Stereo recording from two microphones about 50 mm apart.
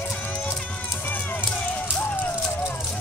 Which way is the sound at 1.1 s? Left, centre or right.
Left.